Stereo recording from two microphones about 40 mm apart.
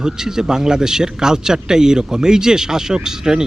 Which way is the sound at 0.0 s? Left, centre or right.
Centre.